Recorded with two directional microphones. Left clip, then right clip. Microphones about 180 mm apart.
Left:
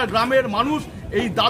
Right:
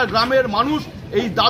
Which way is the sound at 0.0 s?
20° left (ahead or behind).